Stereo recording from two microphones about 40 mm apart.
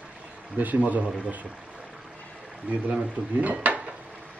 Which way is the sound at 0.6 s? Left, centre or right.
Right.